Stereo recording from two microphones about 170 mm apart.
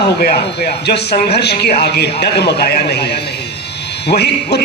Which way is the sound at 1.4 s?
75° left (ahead or behind).